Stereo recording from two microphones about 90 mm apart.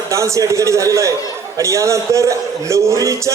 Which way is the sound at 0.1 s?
35° right (ahead or behind).